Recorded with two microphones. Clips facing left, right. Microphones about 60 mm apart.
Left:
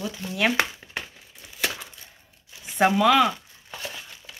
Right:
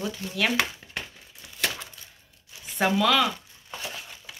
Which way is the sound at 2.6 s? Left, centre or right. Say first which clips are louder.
Left 4 dB; centre.